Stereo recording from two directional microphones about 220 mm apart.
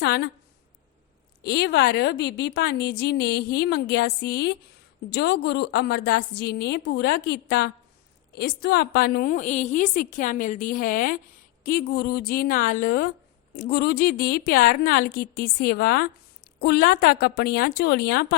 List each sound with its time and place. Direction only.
0.0 s a woman's voice: 45° left (ahead or behind)
1.5 s a woman's voice: 45° left (ahead or behind)